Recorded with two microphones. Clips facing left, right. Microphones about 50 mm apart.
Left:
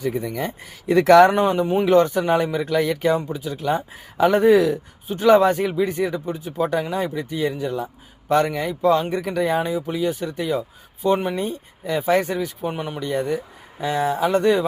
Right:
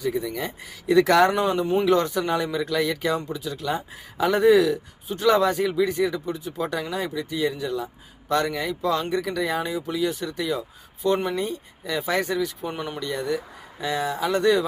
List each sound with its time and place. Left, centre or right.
0.0 s speech: left
1.6 s speech: left
1.9 s speech: left
11.0 s speech: left
11.3 s speech: left; by 13.1 s centre
13.1 s speech: left